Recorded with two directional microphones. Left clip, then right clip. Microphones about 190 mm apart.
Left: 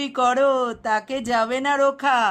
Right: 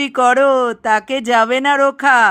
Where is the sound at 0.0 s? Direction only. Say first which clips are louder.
Right 7 dB; 25° right (ahead or behind).